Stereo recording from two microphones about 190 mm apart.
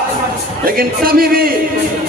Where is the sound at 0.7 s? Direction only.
50° right (ahead or behind).